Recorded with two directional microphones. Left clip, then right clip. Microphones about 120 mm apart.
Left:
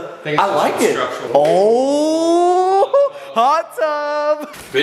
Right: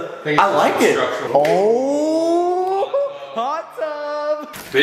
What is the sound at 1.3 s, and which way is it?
Speech, 90° left.